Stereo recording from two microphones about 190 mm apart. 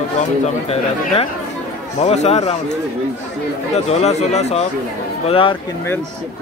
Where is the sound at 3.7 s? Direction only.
35° left (ahead or behind).